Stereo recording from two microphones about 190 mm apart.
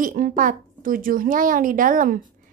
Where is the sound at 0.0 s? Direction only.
45° right (ahead or behind).